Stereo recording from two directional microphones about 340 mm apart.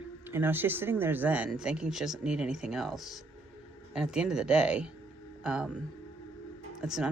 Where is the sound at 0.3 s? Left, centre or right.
Centre.